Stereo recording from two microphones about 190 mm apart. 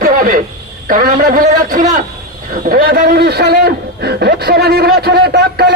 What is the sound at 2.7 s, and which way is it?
Speech, 55° right (ahead or behind).